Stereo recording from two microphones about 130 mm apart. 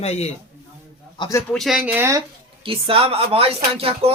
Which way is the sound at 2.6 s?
45° right (ahead or behind).